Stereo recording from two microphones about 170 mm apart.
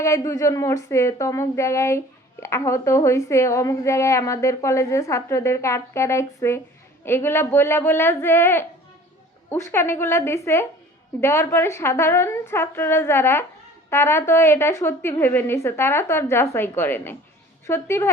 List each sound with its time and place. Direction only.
0.0 s a woman's voice: 15° left (ahead or behind)